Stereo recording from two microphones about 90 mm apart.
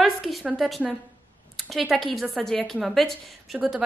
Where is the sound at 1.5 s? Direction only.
Centre (ahead or behind).